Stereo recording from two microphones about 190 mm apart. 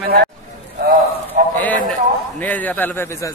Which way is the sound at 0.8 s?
50° right (ahead or behind).